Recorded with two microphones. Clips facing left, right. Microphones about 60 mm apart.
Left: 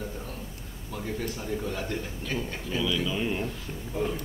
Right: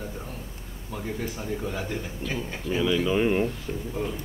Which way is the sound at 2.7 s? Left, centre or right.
Right.